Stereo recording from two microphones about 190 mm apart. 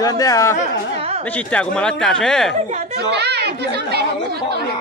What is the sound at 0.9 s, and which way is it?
Speech, 35° right (ahead or behind).